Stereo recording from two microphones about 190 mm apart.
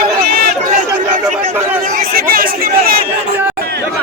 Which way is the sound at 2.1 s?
50° right (ahead or behind).